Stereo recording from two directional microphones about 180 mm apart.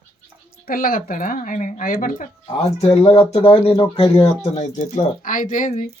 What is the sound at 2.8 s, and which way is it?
Speech, 35° left (ahead or behind).